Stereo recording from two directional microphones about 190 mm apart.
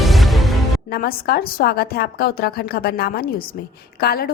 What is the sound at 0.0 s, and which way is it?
Music, centre (ahead or behind).